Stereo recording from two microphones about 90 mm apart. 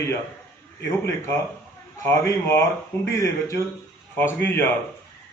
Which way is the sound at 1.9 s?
35° left (ahead or behind).